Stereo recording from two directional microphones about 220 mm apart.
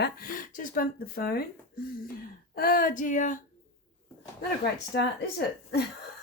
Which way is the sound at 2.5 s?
40° left (ahead or behind).